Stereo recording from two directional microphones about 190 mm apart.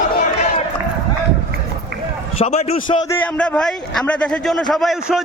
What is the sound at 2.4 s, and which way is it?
Speech, 35° left (ahead or behind).